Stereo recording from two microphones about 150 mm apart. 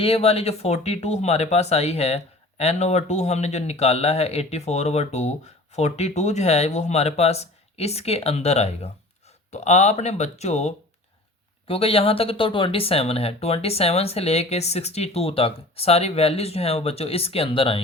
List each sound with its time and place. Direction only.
0.0 s speech: 40° left (ahead or behind)